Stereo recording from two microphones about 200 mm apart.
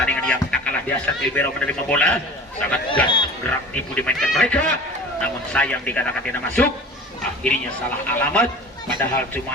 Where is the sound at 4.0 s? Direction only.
5° left (ahead or behind).